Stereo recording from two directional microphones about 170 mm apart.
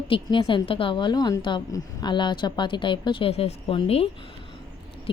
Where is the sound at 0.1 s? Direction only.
30° left (ahead or behind).